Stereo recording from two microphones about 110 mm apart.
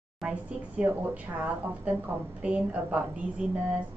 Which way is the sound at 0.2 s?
10° right (ahead or behind).